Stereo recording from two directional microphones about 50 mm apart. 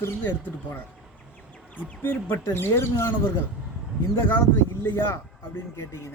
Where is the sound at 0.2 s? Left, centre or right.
Left.